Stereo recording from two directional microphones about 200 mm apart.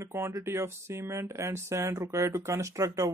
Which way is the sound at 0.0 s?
15° right (ahead or behind).